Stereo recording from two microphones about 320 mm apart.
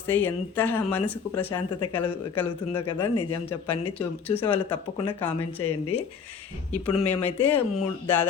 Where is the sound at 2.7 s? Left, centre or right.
Left.